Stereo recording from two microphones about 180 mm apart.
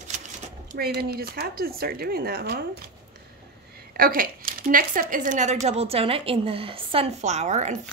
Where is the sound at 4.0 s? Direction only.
50° right (ahead or behind).